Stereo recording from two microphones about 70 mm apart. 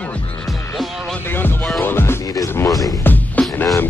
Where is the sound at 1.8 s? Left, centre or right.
Left.